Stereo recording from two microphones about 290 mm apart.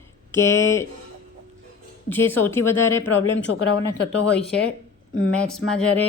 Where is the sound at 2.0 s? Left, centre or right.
Centre.